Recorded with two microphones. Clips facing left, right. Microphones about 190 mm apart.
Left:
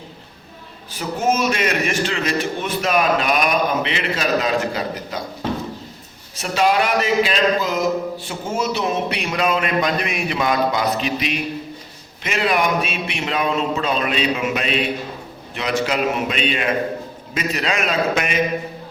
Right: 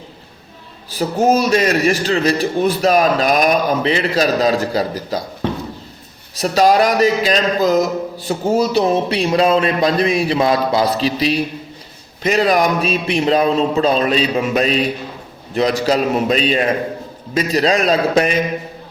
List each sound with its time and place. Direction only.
0.9 s speech: 35° right (ahead or behind)
6.3 s speech: 40° right (ahead or behind)